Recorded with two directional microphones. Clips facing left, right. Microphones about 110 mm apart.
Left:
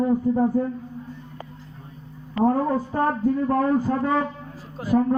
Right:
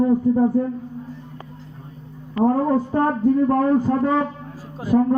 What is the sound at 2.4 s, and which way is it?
A man's voice, 20° right (ahead or behind).